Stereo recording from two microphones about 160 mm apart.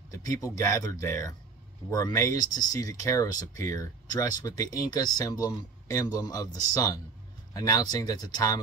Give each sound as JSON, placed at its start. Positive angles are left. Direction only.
{"t": 0.2, "sound": "speech", "side_deg": 20}